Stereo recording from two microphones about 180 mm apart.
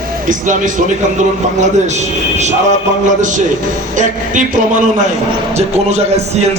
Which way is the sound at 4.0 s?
45° right (ahead or behind).